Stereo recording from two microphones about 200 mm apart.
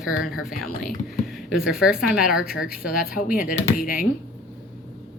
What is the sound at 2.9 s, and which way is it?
Speech, 45° left (ahead or behind).